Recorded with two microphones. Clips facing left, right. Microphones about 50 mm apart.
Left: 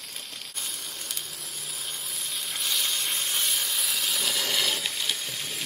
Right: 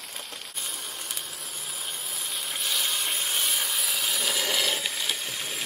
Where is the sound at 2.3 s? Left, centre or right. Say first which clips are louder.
Even; centre.